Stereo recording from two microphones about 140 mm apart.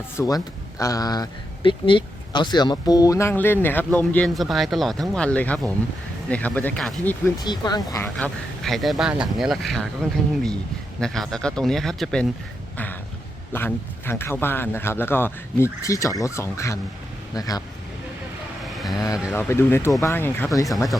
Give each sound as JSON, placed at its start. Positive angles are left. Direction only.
{"t": 0.2, "sound": "speech", "side_deg": 25}
{"t": 7.4, "sound": "speech", "side_deg": 30}
{"t": 8.2, "sound": "speech", "side_deg": 0}
{"t": 11.0, "sound": "speech", "side_deg": 5}
{"t": 12.7, "sound": "a sound", "side_deg": 10}
{"t": 13.5, "sound": "speech", "side_deg": 15}
{"t": 18.6, "sound": "vehicle", "side_deg": 0}
{"t": 18.9, "sound": "speech", "side_deg": 25}